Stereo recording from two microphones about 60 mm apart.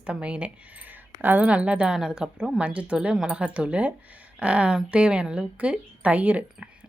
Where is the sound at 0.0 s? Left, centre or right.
Centre.